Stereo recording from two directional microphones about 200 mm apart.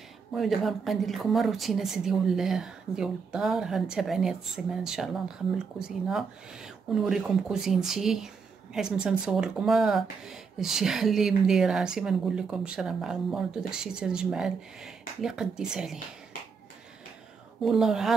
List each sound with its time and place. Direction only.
0.3 s speech: centre (ahead or behind)
17.6 s speech: centre (ahead or behind)